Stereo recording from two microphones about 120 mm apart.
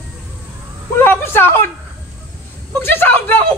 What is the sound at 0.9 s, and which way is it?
Speech, 20° left (ahead or behind).